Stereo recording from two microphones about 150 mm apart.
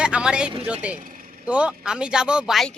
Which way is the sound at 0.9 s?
65° right (ahead or behind).